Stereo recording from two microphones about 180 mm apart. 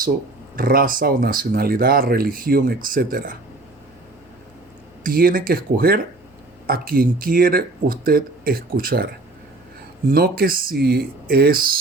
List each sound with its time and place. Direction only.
0.5 s speech: 55° right (ahead or behind)
5.0 s speech: 55° right (ahead or behind)
10.1 s speech: 55° right (ahead or behind)